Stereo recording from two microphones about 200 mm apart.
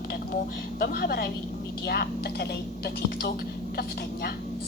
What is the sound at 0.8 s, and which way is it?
Speech, 50° left (ahead or behind).